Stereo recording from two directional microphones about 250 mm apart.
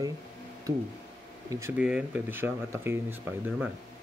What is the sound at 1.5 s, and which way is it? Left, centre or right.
Speech, centre.